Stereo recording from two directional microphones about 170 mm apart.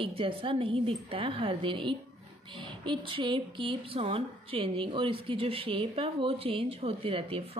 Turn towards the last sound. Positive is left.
turn(degrees=-35)  # may be behind; listen again after turning